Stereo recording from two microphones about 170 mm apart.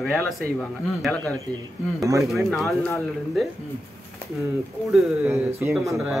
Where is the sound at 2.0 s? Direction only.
20° right (ahead or behind).